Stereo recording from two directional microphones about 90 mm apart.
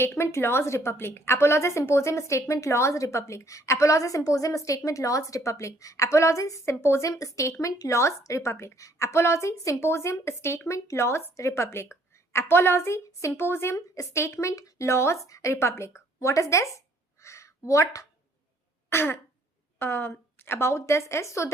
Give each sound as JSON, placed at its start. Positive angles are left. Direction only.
{"t": 0.0, "sound": "a woman's voice", "side_deg": 30}
{"t": 17.2, "sound": "a sound", "side_deg": 35}
{"t": 18.9, "sound": "throat clearing", "side_deg": 25}
{"t": 19.8, "sound": "a woman's voice", "side_deg": 25}